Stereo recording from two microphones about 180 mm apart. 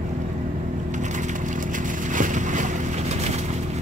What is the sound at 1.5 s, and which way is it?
Vehicle, 45° right (ahead or behind).